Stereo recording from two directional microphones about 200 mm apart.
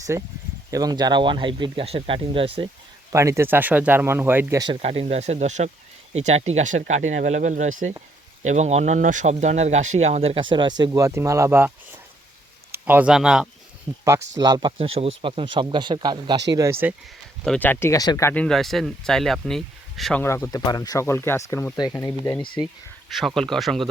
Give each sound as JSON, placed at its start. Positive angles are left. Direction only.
{"t": 0.1, "sound": "speech", "side_deg": -15}
{"t": 3.1, "sound": "speech", "side_deg": -15}
{"t": 4.6, "sound": "speech", "side_deg": -30}
{"t": 12.7, "sound": "speech", "side_deg": -10}
{"t": 14.3, "sound": "speech", "side_deg": -20}
{"t": 17.4, "sound": "speech", "side_deg": 5}
{"t": 20.2, "sound": "speech", "side_deg": 15}
{"t": 23.0, "sound": "speech", "side_deg": 0}